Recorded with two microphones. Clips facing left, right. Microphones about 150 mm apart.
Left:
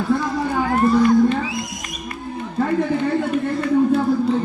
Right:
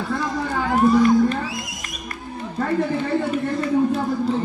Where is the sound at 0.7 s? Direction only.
Centre (ahead or behind).